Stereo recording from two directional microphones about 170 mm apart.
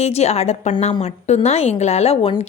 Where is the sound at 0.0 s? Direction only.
40° left (ahead or behind).